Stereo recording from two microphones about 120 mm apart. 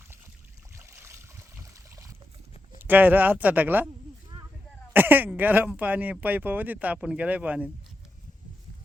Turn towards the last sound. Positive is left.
turn(degrees=-10)  # may be behind; listen again after turning